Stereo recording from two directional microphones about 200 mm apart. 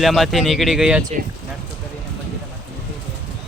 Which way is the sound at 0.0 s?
Centre (ahead or behind).